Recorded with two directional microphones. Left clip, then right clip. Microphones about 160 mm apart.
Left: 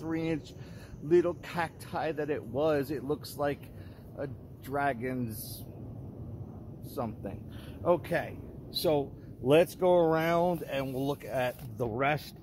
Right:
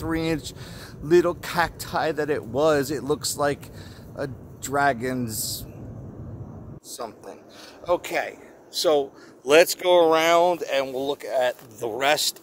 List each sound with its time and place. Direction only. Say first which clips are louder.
0.0 s speech: right 7 dB; 20° right (ahead or behind)
7.0 s speech: right 2 dB; 15° right (ahead or behind)
7.8 s speech: right 4 dB; 25° right (ahead or behind)
9.5 s speech: right 7 dB; 45° right (ahead or behind)